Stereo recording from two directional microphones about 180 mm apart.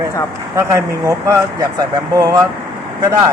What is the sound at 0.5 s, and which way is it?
Speech, 15° right (ahead or behind).